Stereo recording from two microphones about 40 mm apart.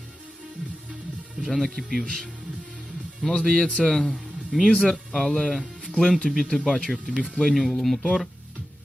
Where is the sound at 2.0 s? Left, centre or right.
Centre.